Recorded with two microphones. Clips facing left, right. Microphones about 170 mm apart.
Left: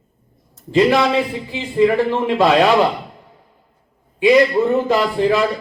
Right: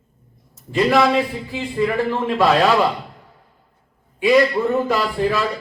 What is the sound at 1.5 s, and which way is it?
Speech, 20° left (ahead or behind).